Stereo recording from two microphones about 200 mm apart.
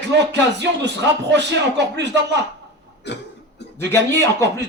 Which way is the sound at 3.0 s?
60° left (ahead or behind).